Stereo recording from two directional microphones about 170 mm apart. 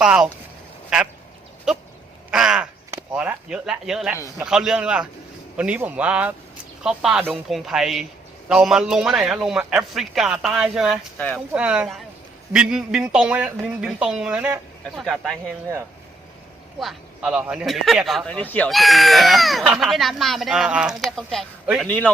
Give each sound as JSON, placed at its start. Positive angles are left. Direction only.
{"t": 0.0, "sound": "speech", "side_deg": -5}
{"t": 1.7, "sound": "a sound", "side_deg": -5}
{"t": 2.3, "sound": "crow", "side_deg": -5}
{"t": 2.9, "sound": "chop", "side_deg": -10}
{"t": 4.4, "sound": "speech", "side_deg": -5}
{"t": 16.8, "sound": "a man's voice", "side_deg": 0}